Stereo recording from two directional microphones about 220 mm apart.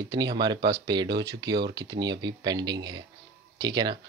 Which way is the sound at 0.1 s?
20° right (ahead or behind).